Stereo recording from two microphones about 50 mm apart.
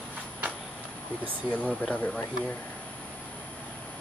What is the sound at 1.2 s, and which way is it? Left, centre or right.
Speech, left.